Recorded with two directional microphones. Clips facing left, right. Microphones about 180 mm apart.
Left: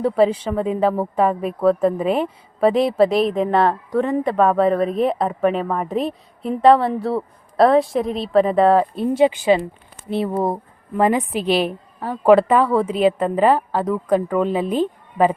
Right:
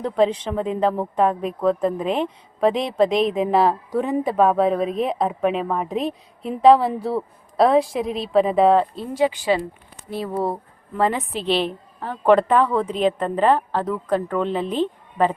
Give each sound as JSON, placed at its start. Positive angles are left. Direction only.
{"t": 0.0, "sound": "a woman's voice", "side_deg": 5}
{"t": 9.1, "sound": "a woman's voice", "side_deg": 20}